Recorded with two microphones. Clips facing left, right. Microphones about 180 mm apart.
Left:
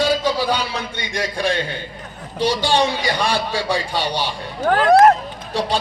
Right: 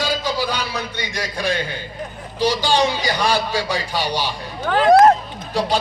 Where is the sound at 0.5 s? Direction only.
30° left (ahead or behind).